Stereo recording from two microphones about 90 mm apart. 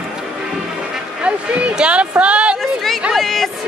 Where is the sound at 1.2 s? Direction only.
10° right (ahead or behind).